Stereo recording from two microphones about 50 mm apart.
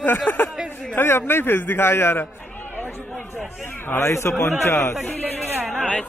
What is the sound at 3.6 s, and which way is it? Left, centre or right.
Speech, left.